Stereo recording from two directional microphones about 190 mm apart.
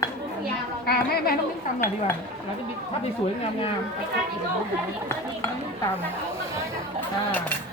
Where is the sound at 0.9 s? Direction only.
55° left (ahead or behind).